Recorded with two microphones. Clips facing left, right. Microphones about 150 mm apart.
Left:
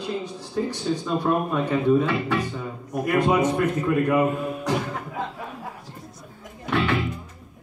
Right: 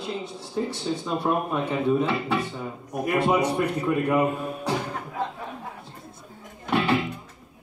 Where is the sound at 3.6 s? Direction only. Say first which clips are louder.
Left 2 dB; 10° right (ahead or behind).